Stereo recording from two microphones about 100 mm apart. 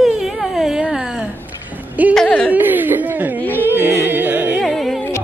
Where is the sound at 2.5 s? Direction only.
20° right (ahead or behind).